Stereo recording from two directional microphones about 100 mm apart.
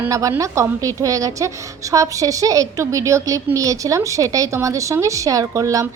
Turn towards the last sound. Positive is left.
turn(degrees=-30)  # may be behind; listen again after turning